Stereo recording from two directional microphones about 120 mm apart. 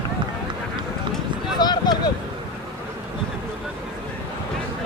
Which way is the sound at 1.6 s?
35° left (ahead or behind).